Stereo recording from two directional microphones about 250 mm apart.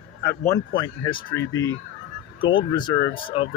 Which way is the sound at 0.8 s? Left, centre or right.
Centre.